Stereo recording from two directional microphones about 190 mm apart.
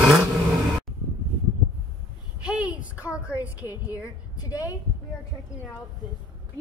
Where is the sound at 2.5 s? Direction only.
10° right (ahead or behind).